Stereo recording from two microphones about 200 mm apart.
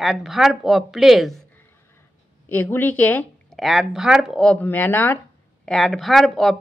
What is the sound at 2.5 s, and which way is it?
A woman's voice, 10° left (ahead or behind).